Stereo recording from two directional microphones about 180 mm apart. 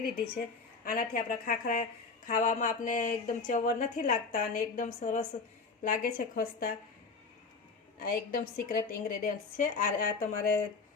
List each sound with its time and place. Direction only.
0.9 s a woman's voice: 50° left (ahead or behind)
5.8 s speech: 50° left (ahead or behind)
7.9 s speech: 55° left (ahead or behind)